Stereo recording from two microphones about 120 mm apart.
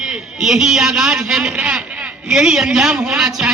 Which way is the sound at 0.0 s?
5° right (ahead or behind).